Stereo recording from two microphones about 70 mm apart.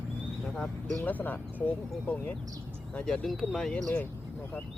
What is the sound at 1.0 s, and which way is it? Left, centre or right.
Speech, left.